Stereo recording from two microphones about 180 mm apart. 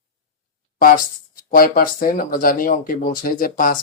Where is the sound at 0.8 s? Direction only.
50° left (ahead or behind).